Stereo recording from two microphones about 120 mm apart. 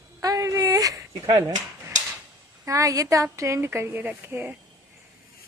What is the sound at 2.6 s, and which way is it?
A woman's voice, 30° right (ahead or behind).